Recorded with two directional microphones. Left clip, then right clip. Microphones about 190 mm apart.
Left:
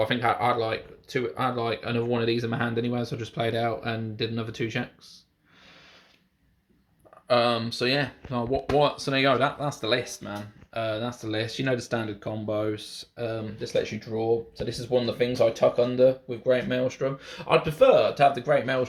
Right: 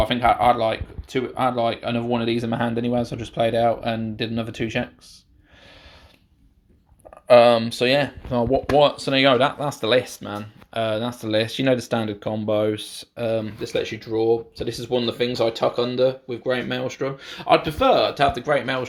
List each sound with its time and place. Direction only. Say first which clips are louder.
0.0 s speech: right 6 dB; 30° right (ahead or behind)
7.3 s speech: right 10 dB; 25° right (ahead or behind)